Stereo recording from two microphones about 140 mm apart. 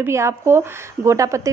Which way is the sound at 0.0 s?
20° right (ahead or behind).